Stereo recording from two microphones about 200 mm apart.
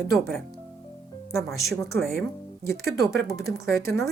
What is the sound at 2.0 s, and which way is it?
Speech, 10° left (ahead or behind).